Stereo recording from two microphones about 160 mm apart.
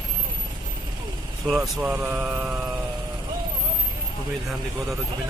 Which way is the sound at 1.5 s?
5° right (ahead or behind).